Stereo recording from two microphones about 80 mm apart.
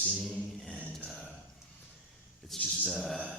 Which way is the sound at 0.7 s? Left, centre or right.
Centre.